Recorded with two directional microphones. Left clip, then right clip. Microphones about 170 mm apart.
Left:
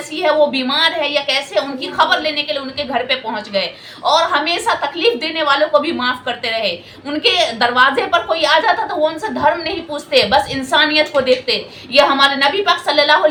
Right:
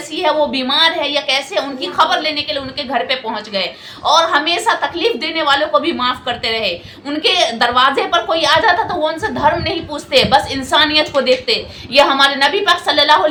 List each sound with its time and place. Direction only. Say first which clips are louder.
0.2 s a woman's voice: left 1 dB; 15° right (ahead or behind)